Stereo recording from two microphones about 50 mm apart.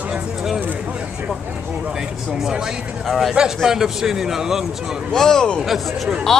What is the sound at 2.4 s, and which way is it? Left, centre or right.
Speech, centre.